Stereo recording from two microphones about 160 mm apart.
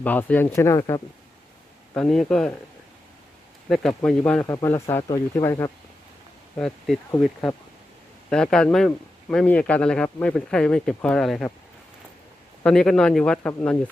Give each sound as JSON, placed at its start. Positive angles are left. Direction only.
{"t": 0.0, "sound": "speech", "side_deg": 10}
{"t": 2.0, "sound": "speech", "side_deg": 5}
{"t": 3.7, "sound": "speech", "side_deg": 5}
{"t": 4.4, "sound": "speech", "side_deg": 20}
{"t": 6.6, "sound": "speech", "side_deg": 5}
{"t": 8.3, "sound": "speech", "side_deg": 5}
{"t": 12.6, "sound": "speech", "side_deg": 5}